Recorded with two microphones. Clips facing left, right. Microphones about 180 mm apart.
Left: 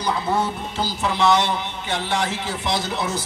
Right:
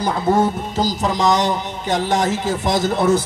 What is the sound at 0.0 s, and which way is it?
Speech, 45° right (ahead or behind).